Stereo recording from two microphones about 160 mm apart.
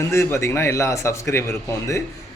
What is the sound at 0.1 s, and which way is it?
A man's voice, 15° left (ahead or behind).